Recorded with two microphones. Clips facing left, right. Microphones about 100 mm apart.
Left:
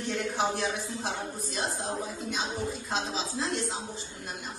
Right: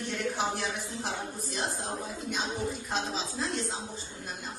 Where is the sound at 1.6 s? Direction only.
15° left (ahead or behind).